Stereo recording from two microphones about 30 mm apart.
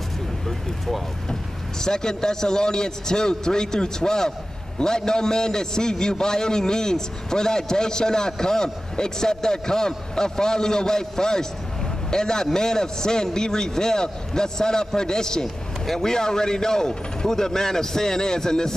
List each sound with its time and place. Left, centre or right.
0.5 s vehicle: centre
1.8 s a man's voice: left